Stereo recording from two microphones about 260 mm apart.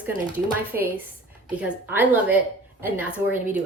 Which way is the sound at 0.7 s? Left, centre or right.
Centre.